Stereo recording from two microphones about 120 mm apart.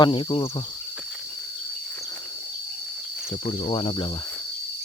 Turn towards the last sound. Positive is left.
turn(degrees=45)  # may be behind; listen again after turning